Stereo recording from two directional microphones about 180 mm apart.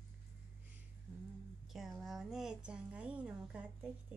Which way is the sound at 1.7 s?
Centre (ahead or behind).